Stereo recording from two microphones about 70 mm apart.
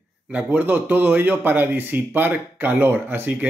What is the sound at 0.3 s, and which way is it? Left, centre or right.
A man's voice, right.